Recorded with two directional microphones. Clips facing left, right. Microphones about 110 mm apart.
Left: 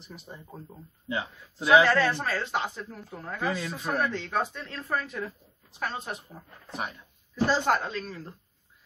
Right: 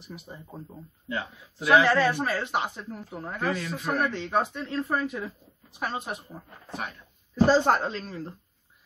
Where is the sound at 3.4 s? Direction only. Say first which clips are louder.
Right 1 dB; 15° left (ahead or behind).